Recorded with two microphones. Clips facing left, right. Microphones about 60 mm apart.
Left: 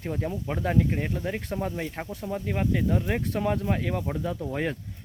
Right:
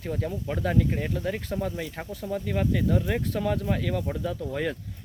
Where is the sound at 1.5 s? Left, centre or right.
Left.